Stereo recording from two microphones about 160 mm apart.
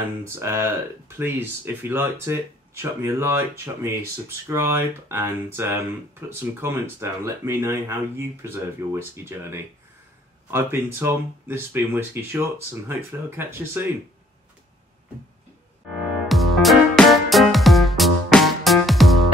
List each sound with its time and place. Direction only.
0.3 s speech: 15° right (ahead or behind)
16.0 s music: centre (ahead or behind)